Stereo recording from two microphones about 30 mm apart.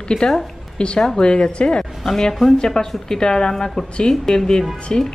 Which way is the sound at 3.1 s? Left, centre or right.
Left.